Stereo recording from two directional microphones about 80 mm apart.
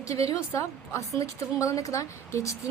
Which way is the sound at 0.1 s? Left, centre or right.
Left.